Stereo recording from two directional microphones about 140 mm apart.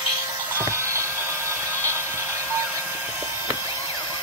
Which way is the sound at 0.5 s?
20° right (ahead or behind).